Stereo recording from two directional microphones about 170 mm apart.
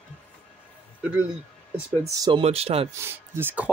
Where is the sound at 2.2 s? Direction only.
30° right (ahead or behind).